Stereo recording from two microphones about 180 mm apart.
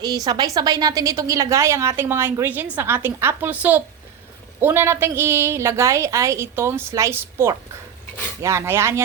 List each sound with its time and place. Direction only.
0.3 s a woman's voice: 20° right (ahead or behind)